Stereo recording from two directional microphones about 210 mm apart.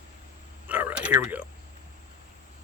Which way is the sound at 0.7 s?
10° right (ahead or behind).